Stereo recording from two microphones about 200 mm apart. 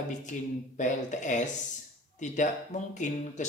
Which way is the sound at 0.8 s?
40° left (ahead or behind).